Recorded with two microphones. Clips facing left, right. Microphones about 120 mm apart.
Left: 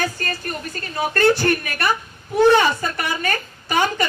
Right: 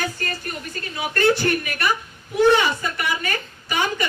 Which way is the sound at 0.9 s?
45° left (ahead or behind).